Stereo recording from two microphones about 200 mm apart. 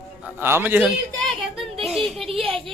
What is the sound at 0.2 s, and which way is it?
Speech, 10° right (ahead or behind).